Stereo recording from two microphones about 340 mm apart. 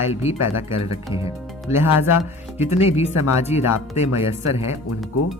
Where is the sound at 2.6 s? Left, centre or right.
Centre.